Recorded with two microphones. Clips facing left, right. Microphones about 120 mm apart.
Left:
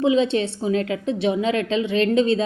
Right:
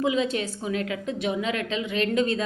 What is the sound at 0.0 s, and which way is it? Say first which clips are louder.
A woman's voice: left 6 dB; 30° left (ahead or behind).